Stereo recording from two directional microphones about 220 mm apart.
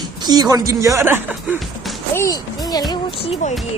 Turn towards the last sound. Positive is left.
turn(degrees=30)  # may be behind; listen again after turning